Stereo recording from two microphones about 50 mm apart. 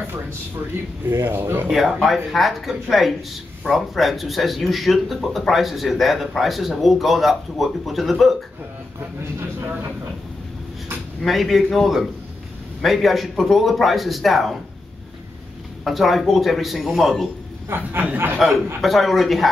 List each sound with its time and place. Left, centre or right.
1.0 s speech: right
2.0 s speech: centre
9.2 s speech: right
11.2 s speech: centre
15.8 s speech: centre
17.6 s speech: right
18.8 s speech: centre